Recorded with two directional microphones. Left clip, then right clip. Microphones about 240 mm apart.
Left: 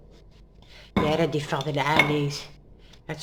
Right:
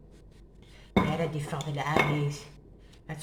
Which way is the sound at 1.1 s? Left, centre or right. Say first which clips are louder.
Left 8 dB; left.